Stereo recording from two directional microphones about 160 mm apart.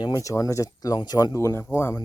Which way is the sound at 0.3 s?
20° left (ahead or behind).